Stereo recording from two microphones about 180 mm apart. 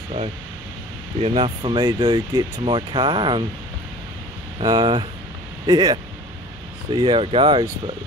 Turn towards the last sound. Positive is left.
turn(degrees=-30)  # may be behind; listen again after turning